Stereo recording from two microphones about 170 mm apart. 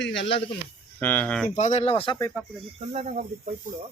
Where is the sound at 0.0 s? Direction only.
90° left.